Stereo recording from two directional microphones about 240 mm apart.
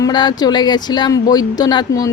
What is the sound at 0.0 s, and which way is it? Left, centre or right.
Speech, centre.